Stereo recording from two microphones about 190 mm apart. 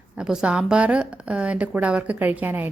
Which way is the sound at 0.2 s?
5° right (ahead or behind).